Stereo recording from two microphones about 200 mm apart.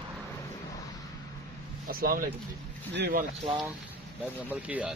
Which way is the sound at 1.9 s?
45° right (ahead or behind).